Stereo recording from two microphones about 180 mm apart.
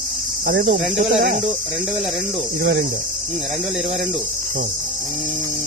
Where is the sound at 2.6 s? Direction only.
65° right (ahead or behind).